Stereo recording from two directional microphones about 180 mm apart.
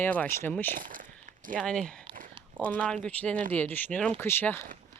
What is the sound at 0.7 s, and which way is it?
Speech, 50° right (ahead or behind).